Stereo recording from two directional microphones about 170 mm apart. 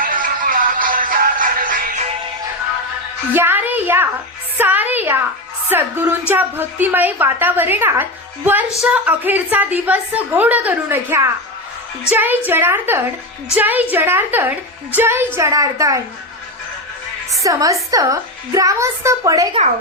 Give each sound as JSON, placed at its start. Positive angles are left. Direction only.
{"t": 0.0, "sound": "music", "side_deg": -55}
{"t": 3.3, "sound": "a woman's voice", "side_deg": -10}
{"t": 4.5, "sound": "music", "side_deg": -10}
{"t": 5.6, "sound": "a woman's voice", "side_deg": -10}
{"t": 17.4, "sound": "a woman's voice", "side_deg": -20}